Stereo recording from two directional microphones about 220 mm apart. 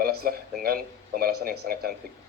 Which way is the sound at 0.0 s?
45° right (ahead or behind).